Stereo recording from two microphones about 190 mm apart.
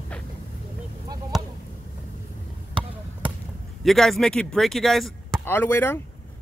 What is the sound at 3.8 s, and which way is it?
Speech, centre (ahead or behind).